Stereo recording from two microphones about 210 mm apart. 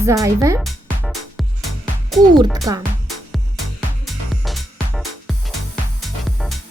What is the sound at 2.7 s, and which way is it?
Speech, 15° right (ahead or behind).